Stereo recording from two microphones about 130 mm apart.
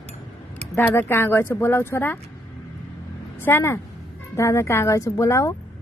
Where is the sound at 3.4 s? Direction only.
20° left (ahead or behind).